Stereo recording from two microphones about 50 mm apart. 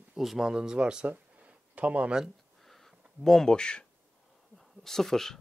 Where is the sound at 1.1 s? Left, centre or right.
Right.